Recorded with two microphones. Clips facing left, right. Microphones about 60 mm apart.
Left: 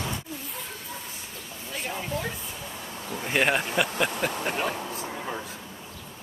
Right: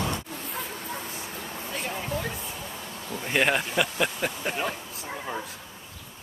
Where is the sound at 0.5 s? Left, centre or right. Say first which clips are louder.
Right 4 dB; right.